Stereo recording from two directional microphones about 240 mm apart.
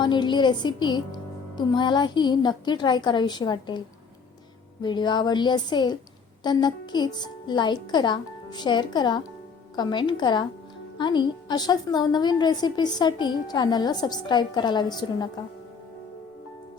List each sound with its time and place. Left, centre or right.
0.0 s a woman's voice: centre